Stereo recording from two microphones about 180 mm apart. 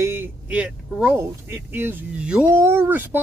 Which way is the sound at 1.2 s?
15° right (ahead or behind).